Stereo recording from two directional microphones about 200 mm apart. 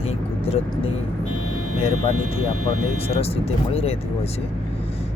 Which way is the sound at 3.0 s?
30° left (ahead or behind).